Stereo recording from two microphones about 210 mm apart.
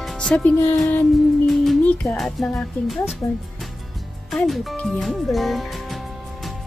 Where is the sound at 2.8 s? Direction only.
Centre (ahead or behind).